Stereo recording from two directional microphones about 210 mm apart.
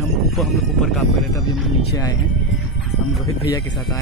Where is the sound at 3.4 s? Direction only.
20° left (ahead or behind).